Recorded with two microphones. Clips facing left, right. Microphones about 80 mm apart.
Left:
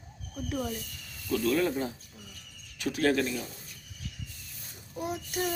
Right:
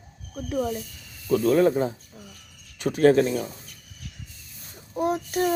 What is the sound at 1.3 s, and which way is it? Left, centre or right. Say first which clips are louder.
A child's voice: right 8 dB; right.